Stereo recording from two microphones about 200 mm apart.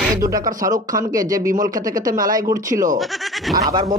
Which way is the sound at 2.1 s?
45° right (ahead or behind).